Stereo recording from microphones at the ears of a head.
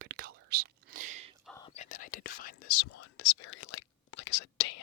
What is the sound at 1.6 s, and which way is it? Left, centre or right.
Whispering, left.